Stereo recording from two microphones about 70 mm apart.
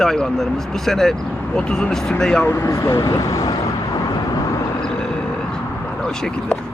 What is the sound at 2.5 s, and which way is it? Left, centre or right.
Speech, left.